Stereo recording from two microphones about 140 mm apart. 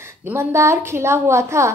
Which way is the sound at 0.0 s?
15° right (ahead or behind).